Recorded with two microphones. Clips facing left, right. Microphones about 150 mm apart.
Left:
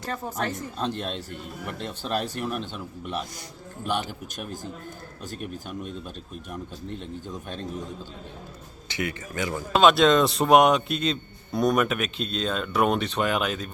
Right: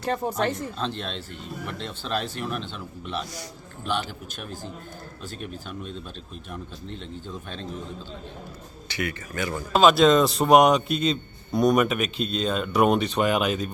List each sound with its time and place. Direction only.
0.0 s speech: 30° right (ahead or behind)
0.8 s speech: 10° left (ahead or behind)
1.3 s speech: 45° left (ahead or behind)
2.4 s speech: 10° left (ahead or behind)
4.4 s speech: 45° left (ahead or behind)
8.9 s a man's voice: 20° left (ahead or behind)
9.7 s a man's voice: centre (ahead or behind)